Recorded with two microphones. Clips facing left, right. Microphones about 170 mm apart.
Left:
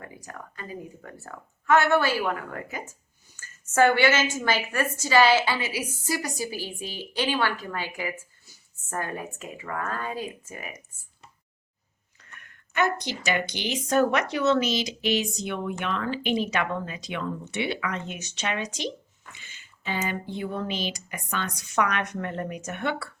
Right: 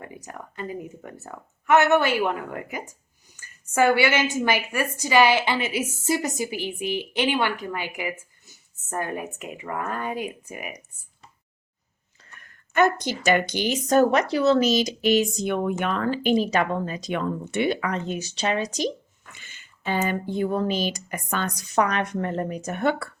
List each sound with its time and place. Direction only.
0.0 s a woman's voice: 20° right (ahead or behind)
12.4 s speech: 40° right (ahead or behind)
19.3 s speech: 55° right (ahead or behind)